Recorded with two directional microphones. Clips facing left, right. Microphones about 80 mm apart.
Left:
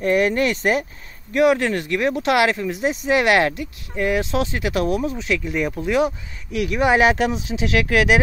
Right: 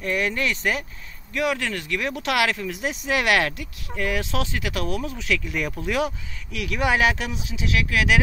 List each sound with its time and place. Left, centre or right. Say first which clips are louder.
0.0 s speech: left 7 dB; left; by 6.0 s centre
6.7 s speech: left 4 dB; left